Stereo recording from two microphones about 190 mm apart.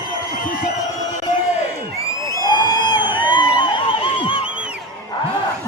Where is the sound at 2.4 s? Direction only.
20° left (ahead or behind).